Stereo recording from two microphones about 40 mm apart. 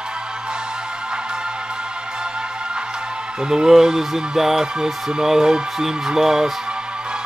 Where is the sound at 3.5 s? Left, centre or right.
Centre.